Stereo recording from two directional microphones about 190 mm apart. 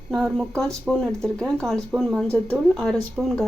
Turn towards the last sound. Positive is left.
turn(degrees=0)  # may be behind; listen again after turning